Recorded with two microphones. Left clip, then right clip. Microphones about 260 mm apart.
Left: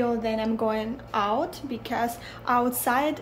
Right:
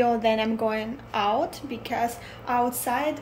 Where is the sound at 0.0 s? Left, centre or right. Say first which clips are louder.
Right 4 dB; centre.